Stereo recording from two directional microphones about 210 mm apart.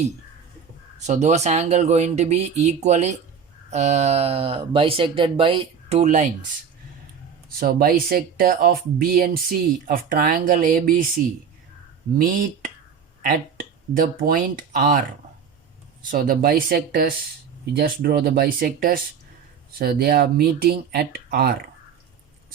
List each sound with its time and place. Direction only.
0.9 s speech: 35° right (ahead or behind)
7.6 s speech: 45° right (ahead or behind)
12.1 s speech: 40° right (ahead or behind)
13.9 s speech: 40° right (ahead or behind)
16.1 s speech: 45° right (ahead or behind)